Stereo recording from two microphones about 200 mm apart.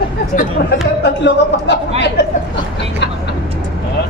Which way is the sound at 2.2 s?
60° left (ahead or behind).